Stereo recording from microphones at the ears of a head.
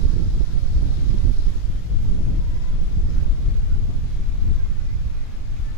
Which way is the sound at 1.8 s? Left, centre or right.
Left.